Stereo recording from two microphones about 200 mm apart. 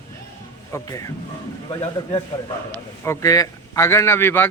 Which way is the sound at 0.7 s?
15° left (ahead or behind).